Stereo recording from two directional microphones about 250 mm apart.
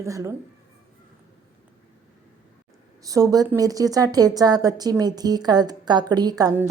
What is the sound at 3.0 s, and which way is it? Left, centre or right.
A woman's voice, centre.